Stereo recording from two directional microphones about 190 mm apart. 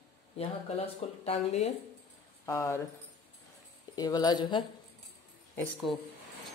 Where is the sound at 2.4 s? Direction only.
15° left (ahead or behind).